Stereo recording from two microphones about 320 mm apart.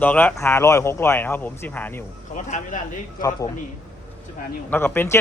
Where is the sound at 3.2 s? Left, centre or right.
Centre.